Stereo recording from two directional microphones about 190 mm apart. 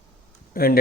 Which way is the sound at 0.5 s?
50° left (ahead or behind).